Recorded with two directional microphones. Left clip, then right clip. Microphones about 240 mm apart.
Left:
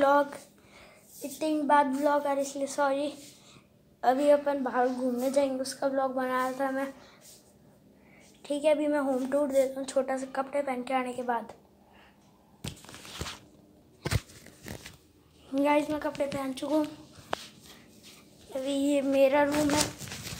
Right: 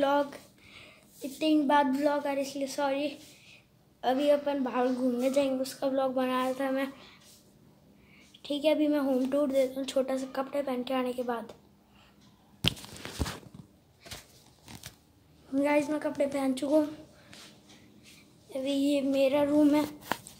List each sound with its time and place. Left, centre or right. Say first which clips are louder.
0.0 s a woman's voice: left 3 dB; centre
1.4 s a woman's voice: left 1 dB; centre
8.4 s speech: left 1 dB; centre
15.5 s speech: left 1 dB; centre
16.3 s a woman's voice: right 3 dB; right
18.5 s a woman's voice: left 1 dB; centre